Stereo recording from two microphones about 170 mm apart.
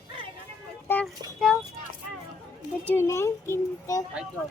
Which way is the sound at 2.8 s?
15° left (ahead or behind).